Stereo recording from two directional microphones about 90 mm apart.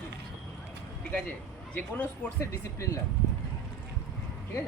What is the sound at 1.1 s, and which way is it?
Speech, 15° left (ahead or behind).